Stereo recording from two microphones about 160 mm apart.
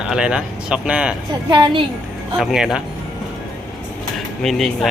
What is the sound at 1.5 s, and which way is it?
Speech, 30° right (ahead or behind).